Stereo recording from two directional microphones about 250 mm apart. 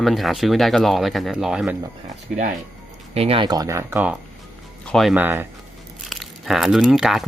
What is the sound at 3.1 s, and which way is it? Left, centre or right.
Speech, right.